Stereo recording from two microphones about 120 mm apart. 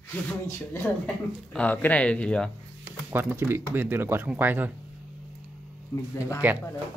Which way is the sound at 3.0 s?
20° right (ahead or behind).